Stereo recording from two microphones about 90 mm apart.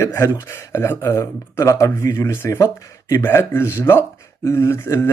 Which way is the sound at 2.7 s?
40° left (ahead or behind).